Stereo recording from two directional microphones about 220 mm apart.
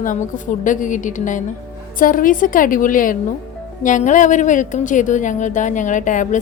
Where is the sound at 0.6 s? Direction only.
35° left (ahead or behind).